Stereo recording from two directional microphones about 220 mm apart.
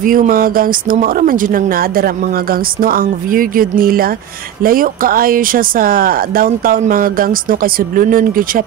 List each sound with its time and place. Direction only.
0.0 s speech: 40° right (ahead or behind)